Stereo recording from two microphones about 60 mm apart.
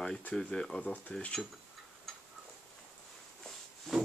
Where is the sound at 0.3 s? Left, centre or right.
Centre.